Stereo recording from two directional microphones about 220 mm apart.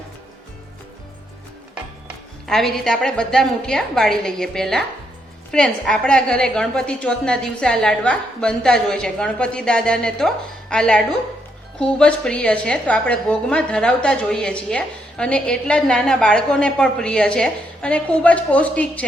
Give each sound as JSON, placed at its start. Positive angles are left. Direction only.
{"t": 1.7, "sound": "a woman's voice", "side_deg": 0}